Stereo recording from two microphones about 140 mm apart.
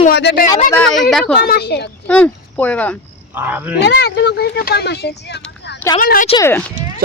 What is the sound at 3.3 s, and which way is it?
Speech, 15° right (ahead or behind).